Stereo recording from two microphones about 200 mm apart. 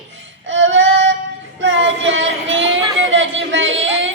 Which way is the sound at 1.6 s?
65° right (ahead or behind).